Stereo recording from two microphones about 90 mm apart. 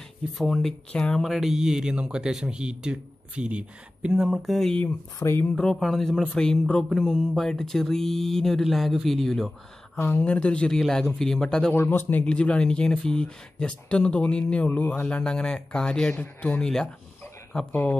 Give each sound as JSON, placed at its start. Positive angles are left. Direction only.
{"t": 0.4, "sound": "speech", "side_deg": 5}
{"t": 4.8, "sound": "speech", "side_deg": 30}
{"t": 5.5, "sound": "speech", "side_deg": 5}
{"t": 9.9, "sound": "speech", "side_deg": 25}
{"t": 10.2, "sound": "speech", "side_deg": 10}
{"t": 11.7, "sound": "speech", "side_deg": 25}